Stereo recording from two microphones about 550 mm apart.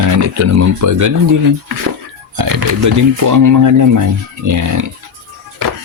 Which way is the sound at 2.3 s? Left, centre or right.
Right.